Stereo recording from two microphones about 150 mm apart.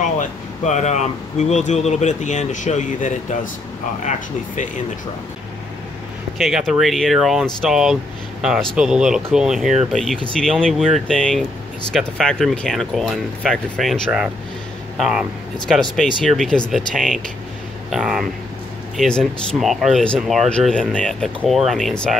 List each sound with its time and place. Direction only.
0.2 s speech: 50° left (ahead or behind)
6.3 s speech: centre (ahead or behind)